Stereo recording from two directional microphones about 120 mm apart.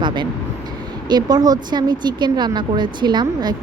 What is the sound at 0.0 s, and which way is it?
Speech, 40° right (ahead or behind).